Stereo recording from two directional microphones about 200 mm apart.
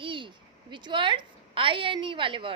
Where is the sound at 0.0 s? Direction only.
25° right (ahead or behind).